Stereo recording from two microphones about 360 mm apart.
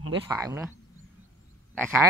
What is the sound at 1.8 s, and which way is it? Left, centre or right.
Speech, centre.